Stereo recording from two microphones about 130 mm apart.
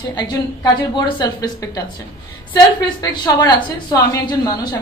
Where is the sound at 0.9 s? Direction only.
35° left (ahead or behind).